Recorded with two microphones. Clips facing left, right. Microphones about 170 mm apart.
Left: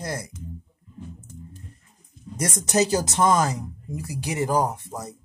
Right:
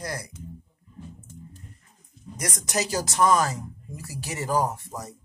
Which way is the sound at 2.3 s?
25° left (ahead or behind).